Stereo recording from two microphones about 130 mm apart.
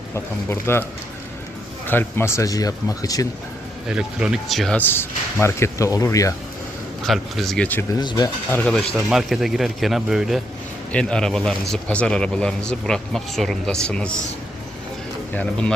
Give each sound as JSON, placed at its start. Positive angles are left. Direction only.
{"t": 0.1, "sound": "speech", "side_deg": 20}
{"t": 1.9, "sound": "speech", "side_deg": 15}
{"t": 3.8, "sound": "speech", "side_deg": -5}
{"t": 4.9, "sound": "speech", "side_deg": 20}
{"t": 7.0, "sound": "speech", "side_deg": 0}
{"t": 7.9, "sound": "speech", "side_deg": 30}
{"t": 8.4, "sound": "speech", "side_deg": 15}
{"t": 9.0, "sound": "speech", "side_deg": 0}